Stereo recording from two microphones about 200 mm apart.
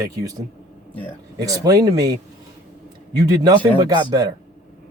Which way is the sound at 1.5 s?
20° right (ahead or behind).